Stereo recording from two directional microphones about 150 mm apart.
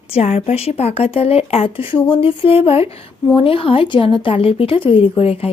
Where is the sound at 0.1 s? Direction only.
45° left (ahead or behind).